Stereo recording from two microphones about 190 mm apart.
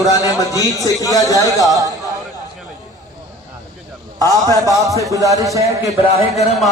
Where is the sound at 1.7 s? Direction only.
20° right (ahead or behind).